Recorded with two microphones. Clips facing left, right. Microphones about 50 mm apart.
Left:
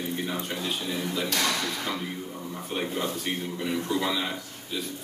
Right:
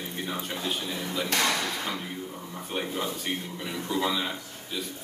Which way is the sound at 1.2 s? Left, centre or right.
Right.